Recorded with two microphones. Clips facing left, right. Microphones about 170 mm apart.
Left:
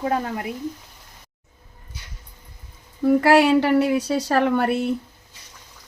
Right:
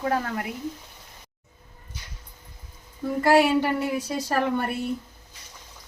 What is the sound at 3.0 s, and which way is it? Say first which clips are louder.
A woman's voice: left 4 dB; 80° left.